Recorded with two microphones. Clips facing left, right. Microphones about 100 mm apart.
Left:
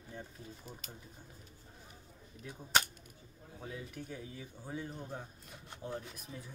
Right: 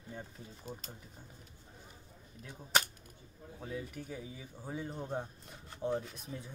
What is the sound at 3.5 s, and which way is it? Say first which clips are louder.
Speech: right 3 dB; centre (ahead or behind).